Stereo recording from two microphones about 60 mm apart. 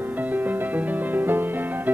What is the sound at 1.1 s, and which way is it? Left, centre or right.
Music, right.